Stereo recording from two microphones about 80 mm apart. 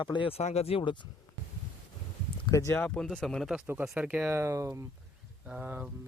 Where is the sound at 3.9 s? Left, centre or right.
Right.